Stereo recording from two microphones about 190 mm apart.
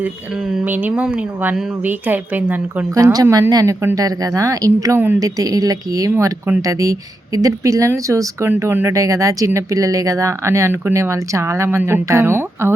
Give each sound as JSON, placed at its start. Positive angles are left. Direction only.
{"t": 0.0, "sound": "speech", "side_deg": -10}